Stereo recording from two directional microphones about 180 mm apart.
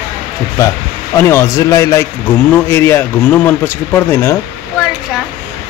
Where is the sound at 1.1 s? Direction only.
15° left (ahead or behind).